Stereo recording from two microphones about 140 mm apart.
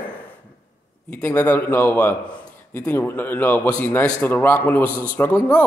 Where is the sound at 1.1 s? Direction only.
15° left (ahead or behind).